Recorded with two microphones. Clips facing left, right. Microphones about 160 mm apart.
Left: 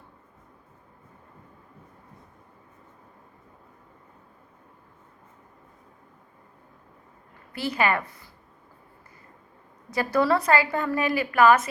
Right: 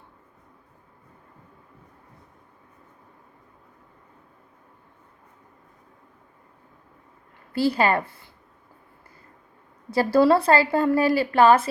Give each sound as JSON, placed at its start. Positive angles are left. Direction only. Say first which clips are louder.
{"t": 7.5, "sound": "a woman's voice", "louder": "right 4 dB", "side_deg": -30}
{"t": 9.9, "sound": "a woman's voice", "louder": "right 5 dB", "side_deg": -30}